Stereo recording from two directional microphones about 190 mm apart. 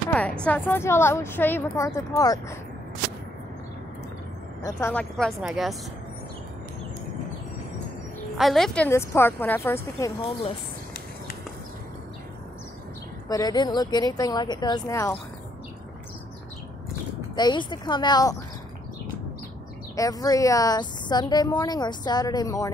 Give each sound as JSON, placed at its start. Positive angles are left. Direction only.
{"t": 0.1, "sound": "a woman's voice", "side_deg": 10}
{"t": 4.6, "sound": "a woman's voice", "side_deg": 15}
{"t": 5.1, "sound": "a woman's voice", "side_deg": 0}
{"t": 8.4, "sound": "a woman's voice", "side_deg": 0}
{"t": 13.3, "sound": "a woman's voice", "side_deg": 20}
{"t": 17.4, "sound": "a woman's voice", "side_deg": 25}
{"t": 20.0, "sound": "a woman's voice", "side_deg": 20}